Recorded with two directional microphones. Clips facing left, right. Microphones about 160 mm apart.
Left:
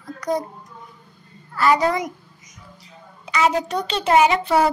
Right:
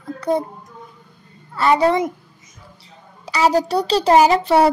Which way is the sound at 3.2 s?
35° right (ahead or behind).